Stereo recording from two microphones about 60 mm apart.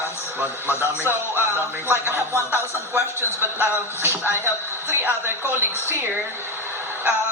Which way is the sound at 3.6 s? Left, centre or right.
Right.